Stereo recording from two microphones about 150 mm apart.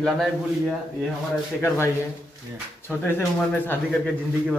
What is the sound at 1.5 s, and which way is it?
Speech, 15° left (ahead or behind).